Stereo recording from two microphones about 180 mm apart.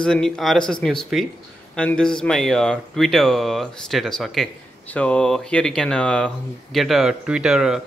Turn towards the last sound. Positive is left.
turn(degrees=-5)  # may be behind; listen again after turning